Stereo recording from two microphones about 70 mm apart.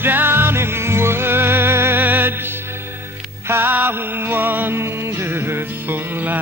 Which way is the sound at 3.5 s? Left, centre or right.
Right.